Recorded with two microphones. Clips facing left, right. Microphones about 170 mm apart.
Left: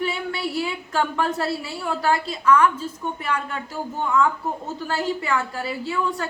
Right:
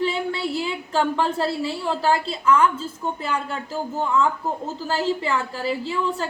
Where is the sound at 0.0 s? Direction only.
30° right (ahead or behind).